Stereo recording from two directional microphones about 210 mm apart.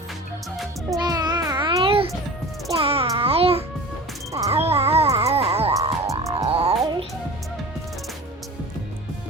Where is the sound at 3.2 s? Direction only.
25° right (ahead or behind).